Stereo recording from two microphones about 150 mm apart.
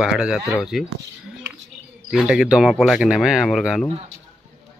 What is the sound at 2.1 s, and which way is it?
Speech, 5° right (ahead or behind).